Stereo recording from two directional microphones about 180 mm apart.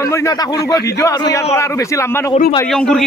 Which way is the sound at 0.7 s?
15° left (ahead or behind).